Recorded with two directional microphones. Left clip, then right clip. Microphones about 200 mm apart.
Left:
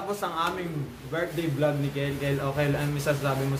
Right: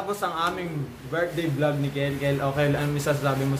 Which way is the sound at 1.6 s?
5° right (ahead or behind).